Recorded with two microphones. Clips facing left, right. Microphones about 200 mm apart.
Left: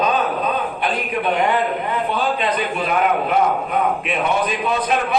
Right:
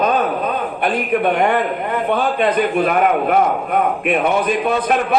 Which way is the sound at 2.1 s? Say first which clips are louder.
Right 6 dB; 55° right (ahead or behind).